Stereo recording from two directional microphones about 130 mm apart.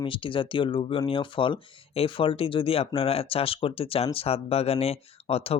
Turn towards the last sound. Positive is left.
turn(degrees=50)  # may be behind; listen again after turning